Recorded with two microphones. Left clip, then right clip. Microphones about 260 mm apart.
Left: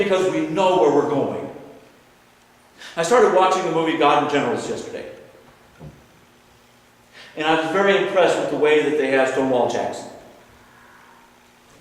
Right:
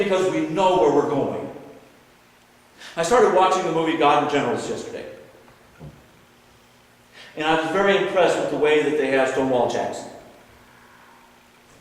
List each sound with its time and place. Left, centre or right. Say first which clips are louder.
0.0 s a man's voice: left 1 dB; centre
2.7 s a man's voice: left 1 dB; centre
5.8 s a sound: left 1 dB; centre
7.2 s a man's voice: left 1 dB; centre